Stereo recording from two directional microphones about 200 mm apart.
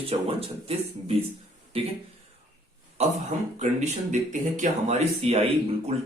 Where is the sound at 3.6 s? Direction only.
35° right (ahead or behind).